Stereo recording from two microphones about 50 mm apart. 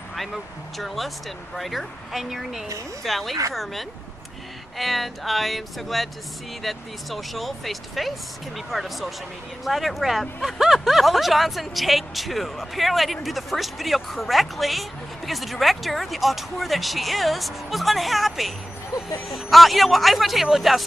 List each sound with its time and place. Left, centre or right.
0.7 s speech: centre
4.7 s speech: centre